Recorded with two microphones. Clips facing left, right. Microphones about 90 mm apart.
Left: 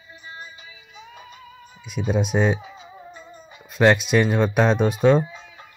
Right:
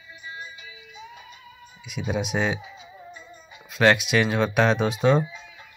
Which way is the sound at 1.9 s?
15° right (ahead or behind).